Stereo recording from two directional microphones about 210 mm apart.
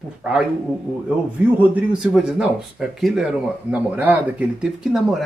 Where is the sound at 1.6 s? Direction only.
5° right (ahead or behind).